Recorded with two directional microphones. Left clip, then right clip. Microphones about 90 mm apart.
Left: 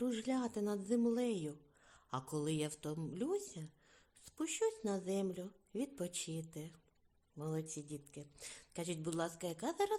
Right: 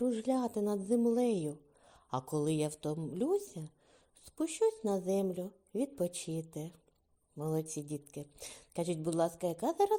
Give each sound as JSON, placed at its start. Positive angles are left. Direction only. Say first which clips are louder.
{"t": 0.0, "sound": "a woman's voice", "louder": "right 6 dB", "side_deg": -15}
{"t": 8.8, "sound": "a woman's voice", "louder": "right 8 dB", "side_deg": -20}